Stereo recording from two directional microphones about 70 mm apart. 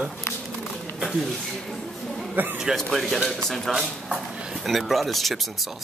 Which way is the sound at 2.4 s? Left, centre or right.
Right.